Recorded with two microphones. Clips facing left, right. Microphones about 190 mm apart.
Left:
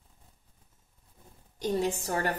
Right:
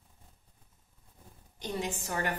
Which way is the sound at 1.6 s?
40° left (ahead or behind).